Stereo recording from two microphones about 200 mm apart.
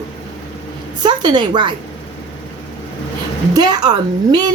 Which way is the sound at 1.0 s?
20° right (ahead or behind).